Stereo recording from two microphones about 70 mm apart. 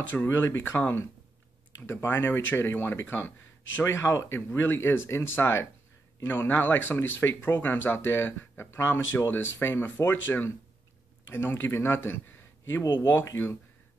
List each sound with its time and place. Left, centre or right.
0.1 s speech: left